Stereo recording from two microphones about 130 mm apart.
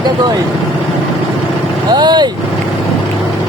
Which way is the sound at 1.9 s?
35° right (ahead or behind).